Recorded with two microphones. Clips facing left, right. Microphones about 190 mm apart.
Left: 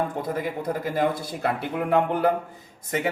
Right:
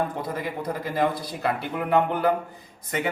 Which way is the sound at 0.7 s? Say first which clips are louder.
Even; 50° left (ahead or behind).